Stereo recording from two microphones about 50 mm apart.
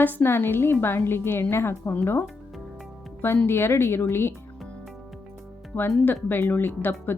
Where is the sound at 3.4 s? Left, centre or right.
Left.